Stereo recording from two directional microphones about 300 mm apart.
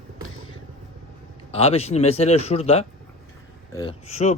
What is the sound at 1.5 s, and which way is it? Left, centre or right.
Speech, centre.